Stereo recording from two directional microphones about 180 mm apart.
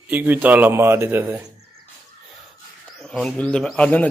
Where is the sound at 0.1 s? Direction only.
10° right (ahead or behind).